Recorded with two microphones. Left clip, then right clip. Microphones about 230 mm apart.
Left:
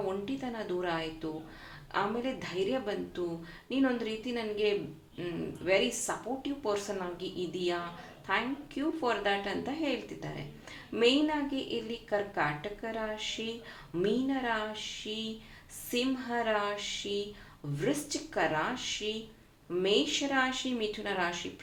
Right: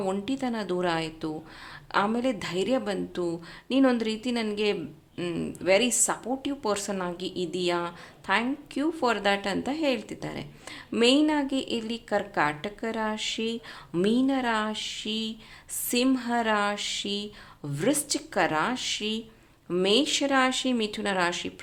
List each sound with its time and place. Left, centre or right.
0.0 s a woman's voice: right